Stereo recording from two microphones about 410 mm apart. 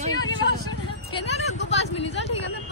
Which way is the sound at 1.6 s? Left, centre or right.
Left.